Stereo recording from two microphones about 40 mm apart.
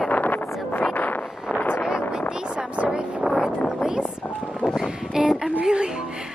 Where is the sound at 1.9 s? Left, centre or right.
Centre.